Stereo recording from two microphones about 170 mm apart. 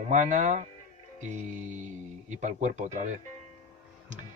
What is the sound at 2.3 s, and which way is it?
Speech, 45° right (ahead or behind).